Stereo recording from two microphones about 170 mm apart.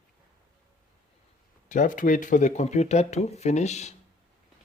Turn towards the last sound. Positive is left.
turn(degrees=40)  # may be behind; listen again after turning